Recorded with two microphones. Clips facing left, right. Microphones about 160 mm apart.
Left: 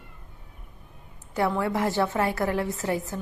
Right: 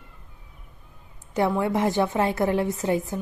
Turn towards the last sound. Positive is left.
turn(degrees=-20)  # may be behind; listen again after turning